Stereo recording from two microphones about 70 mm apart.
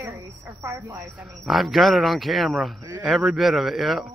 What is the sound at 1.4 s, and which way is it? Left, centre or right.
Speech, centre.